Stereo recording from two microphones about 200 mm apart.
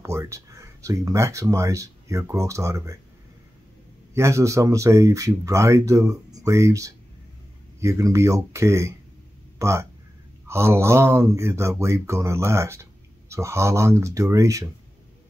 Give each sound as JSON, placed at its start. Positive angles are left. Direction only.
{"t": 0.0, "sound": "speech", "side_deg": -15}
{"t": 4.1, "sound": "speech", "side_deg": -15}